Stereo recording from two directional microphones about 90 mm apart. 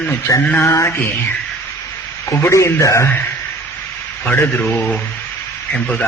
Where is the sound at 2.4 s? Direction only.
35° left (ahead or behind).